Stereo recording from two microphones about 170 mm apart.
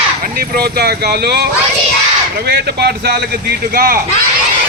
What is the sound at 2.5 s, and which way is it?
Speech, 75° right (ahead or behind).